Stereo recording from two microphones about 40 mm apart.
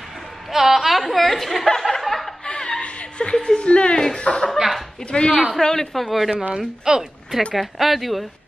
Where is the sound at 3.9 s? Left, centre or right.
Centre.